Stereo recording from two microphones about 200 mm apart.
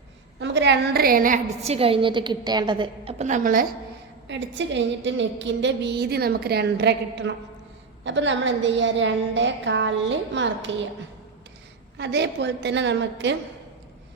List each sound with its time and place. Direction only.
0.3 s a woman's voice: 65° right (ahead or behind); by 3.7 s 45° right (ahead or behind)
4.3 s a woman's voice: 65° right (ahead or behind)
11.9 s a woman's voice: 60° right (ahead or behind)